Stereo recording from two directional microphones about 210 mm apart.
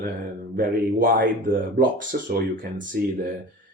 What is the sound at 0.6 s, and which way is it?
Speech, 45° right (ahead or behind).